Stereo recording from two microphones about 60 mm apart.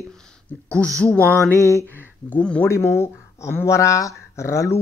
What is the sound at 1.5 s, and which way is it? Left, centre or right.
Speech, left.